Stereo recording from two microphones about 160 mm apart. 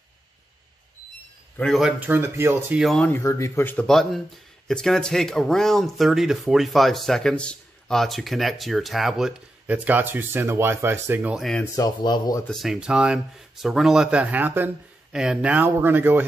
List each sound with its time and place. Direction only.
1.6 s speech: centre (ahead or behind)
2.8 s speech: centre (ahead or behind)
3.1 s speech: 15° left (ahead or behind); by 11.4 s 10° right (ahead or behind)
11.7 s speech: 25° left (ahead or behind)
12.4 s speech: centre (ahead or behind)